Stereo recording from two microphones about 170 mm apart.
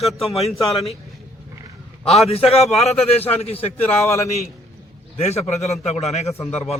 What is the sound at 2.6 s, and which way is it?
Speech, centre (ahead or behind).